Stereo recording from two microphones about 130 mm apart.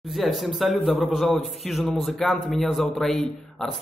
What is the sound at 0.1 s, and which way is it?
Speech, centre (ahead or behind).